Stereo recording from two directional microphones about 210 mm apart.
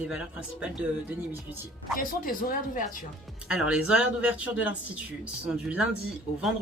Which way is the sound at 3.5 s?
5° right (ahead or behind).